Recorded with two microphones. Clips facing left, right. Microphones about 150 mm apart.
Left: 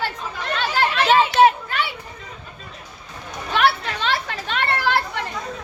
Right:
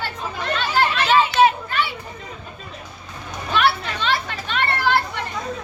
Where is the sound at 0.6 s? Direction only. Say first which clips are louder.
Even; 90° left.